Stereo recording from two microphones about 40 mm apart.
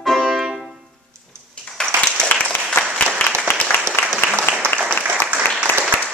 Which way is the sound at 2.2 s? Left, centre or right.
Left.